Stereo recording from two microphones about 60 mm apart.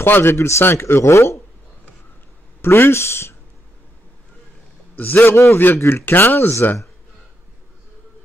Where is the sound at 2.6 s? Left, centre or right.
Left.